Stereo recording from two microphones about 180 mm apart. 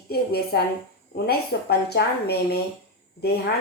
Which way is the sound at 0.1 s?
60° left (ahead or behind).